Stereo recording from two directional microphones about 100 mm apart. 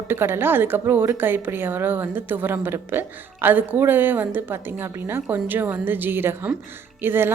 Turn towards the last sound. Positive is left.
turn(degrees=-20)  # may be behind; listen again after turning